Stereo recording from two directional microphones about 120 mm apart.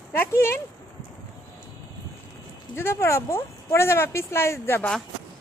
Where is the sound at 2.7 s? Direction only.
20° left (ahead or behind).